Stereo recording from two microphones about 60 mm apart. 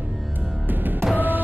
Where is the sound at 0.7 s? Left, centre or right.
Right.